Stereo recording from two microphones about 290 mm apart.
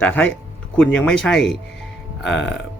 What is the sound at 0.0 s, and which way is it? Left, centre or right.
Speech, centre.